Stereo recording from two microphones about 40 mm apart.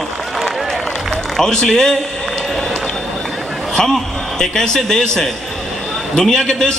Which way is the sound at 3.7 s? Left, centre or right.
Centre.